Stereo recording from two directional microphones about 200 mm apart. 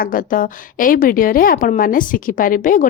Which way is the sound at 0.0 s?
45° left (ahead or behind).